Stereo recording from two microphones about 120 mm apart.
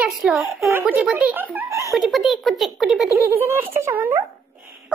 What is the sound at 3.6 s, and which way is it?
Speech, 20° right (ahead or behind).